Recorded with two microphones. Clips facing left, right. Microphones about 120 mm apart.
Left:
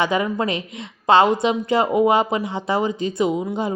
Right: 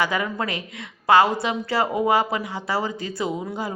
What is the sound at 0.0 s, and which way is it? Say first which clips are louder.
A woman's voice: left 4 dB; 20° left (ahead or behind).